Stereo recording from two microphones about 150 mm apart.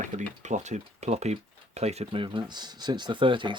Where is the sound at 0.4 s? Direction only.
50° right (ahead or behind).